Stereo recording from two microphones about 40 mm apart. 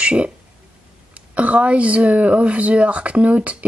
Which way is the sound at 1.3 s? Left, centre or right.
Right.